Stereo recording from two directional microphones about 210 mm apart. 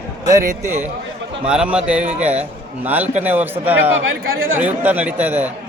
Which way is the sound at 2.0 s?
30° right (ahead or behind).